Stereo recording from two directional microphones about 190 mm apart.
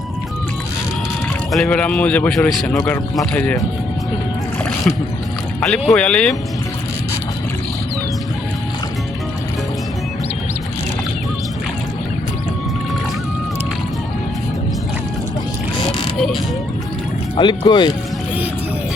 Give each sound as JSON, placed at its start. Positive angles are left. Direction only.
{"t": 1.5, "sound": "a man's voice", "side_deg": 5}
{"t": 5.5, "sound": "a man's voice", "side_deg": 5}
{"t": 15.8, "sound": "a sound", "side_deg": 25}
{"t": 17.3, "sound": "speech", "side_deg": 25}